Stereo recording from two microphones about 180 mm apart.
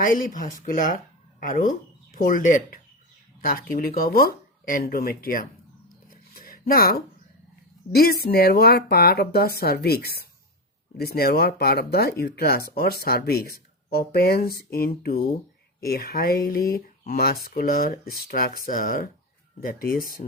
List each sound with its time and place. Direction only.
0.0 s speech: 50° left (ahead or behind)
6.1 s a sound: 50° left (ahead or behind)
7.9 s speech: 60° left (ahead or behind)